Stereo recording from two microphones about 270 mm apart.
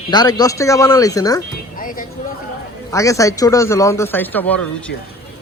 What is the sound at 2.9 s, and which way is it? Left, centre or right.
A man's voice, centre.